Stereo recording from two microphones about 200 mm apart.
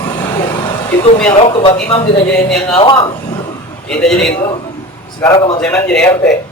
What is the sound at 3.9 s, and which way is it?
Speech, 5° left (ahead or behind).